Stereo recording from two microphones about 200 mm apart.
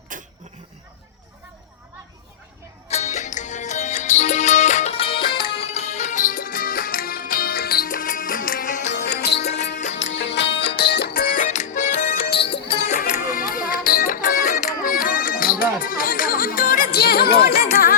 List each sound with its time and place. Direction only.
0.1 s a sound: 40° right (ahead or behind)
2.9 s music: 35° left (ahead or behind)
8.9 s music: 55° left (ahead or behind)
9.4 s music: 30° left (ahead or behind)
9.9 s music: 65° left (ahead or behind); by 12.0 s 35° left (ahead or behind)
12.1 s music: 50° left (ahead or behind)
12.6 s music: 25° left (ahead or behind)
13.1 s music: 40° left (ahead or behind)